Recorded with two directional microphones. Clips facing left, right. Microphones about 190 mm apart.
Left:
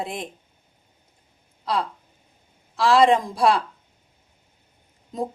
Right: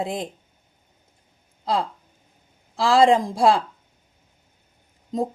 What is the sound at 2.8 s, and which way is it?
Speech, 30° right (ahead or behind).